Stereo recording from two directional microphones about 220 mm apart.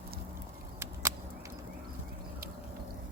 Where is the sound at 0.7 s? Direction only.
10° right (ahead or behind).